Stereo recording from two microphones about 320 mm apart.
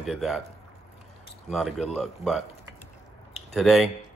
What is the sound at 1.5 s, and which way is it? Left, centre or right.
Speech, centre.